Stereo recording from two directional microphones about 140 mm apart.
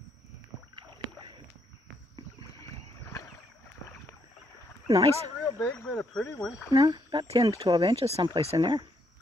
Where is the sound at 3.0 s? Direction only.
20° left (ahead or behind).